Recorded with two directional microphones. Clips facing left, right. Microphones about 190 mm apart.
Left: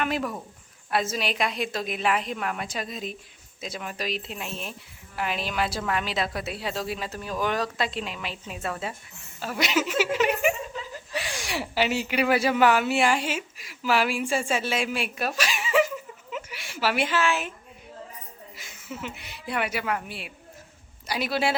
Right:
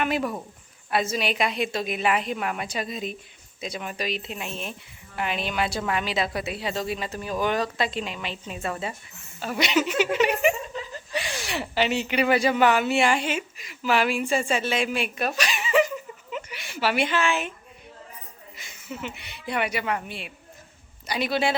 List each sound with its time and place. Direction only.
0.0 s a woman's voice: centre (ahead or behind)
18.5 s a woman's voice: centre (ahead or behind)